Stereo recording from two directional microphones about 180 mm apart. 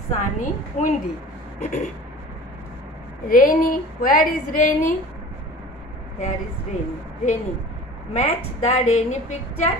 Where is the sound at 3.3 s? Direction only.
50° left (ahead or behind).